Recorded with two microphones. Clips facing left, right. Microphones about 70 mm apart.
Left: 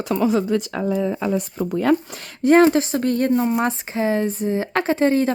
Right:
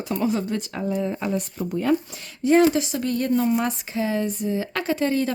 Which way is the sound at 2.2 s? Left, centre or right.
Left.